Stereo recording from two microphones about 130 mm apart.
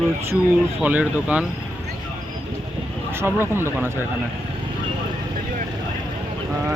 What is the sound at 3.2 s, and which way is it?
Speech, 20° right (ahead or behind).